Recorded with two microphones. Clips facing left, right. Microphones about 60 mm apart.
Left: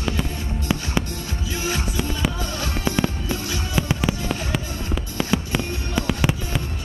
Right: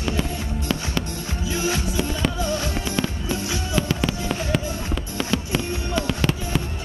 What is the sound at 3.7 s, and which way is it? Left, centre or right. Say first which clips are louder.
Fireworks: even; centre.